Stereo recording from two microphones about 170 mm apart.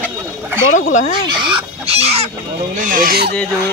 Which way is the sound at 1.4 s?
30° right (ahead or behind).